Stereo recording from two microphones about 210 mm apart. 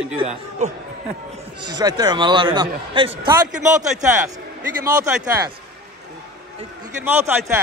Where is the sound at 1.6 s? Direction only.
20° right (ahead or behind).